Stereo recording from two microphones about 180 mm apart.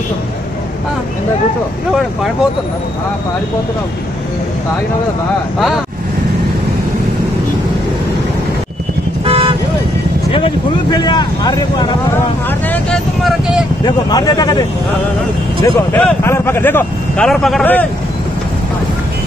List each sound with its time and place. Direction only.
9.2 s vehicle: 30° right (ahead or behind)
10.3 s speech: 25° left (ahead or behind)
12.4 s speech: 10° left (ahead or behind)
13.8 s speech: 20° left (ahead or behind)
15.6 s speech: 10° left (ahead or behind)